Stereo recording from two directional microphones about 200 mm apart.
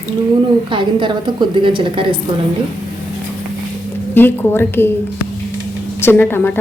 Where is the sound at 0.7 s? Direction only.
25° right (ahead or behind).